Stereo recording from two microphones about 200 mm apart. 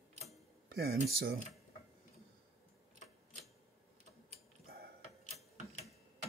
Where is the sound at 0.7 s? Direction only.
50° right (ahead or behind).